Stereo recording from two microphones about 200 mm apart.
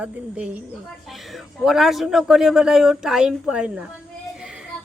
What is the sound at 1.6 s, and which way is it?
Speech, centre (ahead or behind).